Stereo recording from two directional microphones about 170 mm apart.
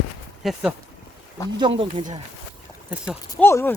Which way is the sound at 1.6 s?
30° right (ahead or behind).